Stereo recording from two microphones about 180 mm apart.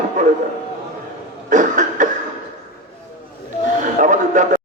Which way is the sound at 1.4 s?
45° right (ahead or behind).